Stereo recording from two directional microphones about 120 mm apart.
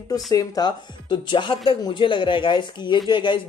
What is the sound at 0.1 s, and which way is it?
Speech, 35° left (ahead or behind).